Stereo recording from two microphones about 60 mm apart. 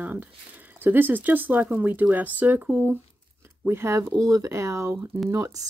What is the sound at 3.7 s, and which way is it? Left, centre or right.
Speech, right.